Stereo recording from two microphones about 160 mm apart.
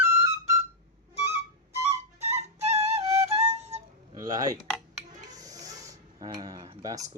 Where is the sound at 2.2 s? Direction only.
40° right (ahead or behind).